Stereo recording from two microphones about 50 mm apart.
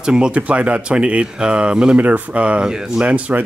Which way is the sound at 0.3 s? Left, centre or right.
Right.